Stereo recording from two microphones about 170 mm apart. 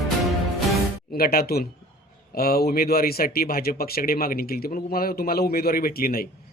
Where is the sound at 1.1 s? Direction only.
65° left (ahead or behind).